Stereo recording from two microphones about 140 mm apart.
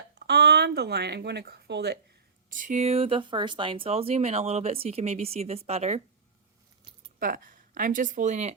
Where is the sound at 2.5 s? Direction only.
65° right (ahead or behind); by 6.0 s 50° right (ahead or behind).